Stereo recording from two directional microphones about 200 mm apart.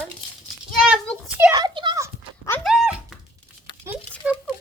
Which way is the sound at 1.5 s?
20° right (ahead or behind).